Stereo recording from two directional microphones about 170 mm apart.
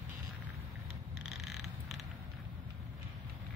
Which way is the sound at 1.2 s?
Centre (ahead or behind).